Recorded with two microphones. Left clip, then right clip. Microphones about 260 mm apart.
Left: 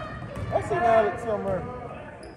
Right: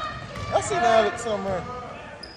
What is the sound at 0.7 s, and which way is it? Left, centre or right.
Speech, right.